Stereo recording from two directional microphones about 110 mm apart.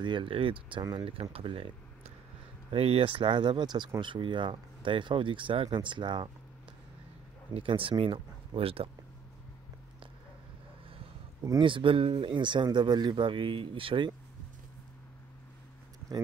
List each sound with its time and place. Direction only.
0.0 s speech: 50° right (ahead or behind)
7.5 s speech: 55° right (ahead or behind)
11.6 s speech: 50° right (ahead or behind)